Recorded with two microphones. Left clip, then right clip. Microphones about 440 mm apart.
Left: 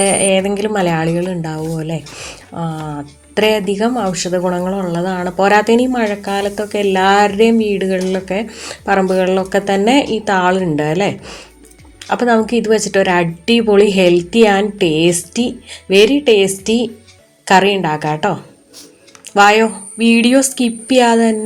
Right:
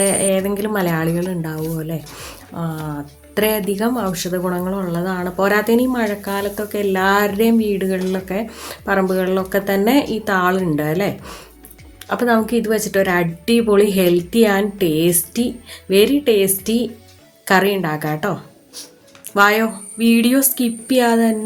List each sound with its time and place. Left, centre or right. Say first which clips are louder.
0.0 s speech: left 4 dB; right